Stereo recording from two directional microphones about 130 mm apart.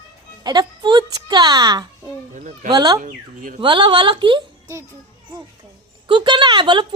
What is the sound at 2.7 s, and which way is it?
A woman's voice, 30° right (ahead or behind).